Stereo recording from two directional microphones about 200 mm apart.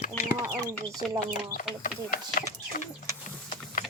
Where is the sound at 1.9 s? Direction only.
45° left (ahead or behind).